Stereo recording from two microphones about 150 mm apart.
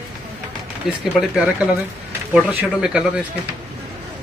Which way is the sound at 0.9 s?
5° right (ahead or behind).